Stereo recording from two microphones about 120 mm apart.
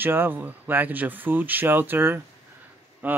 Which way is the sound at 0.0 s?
15° right (ahead or behind).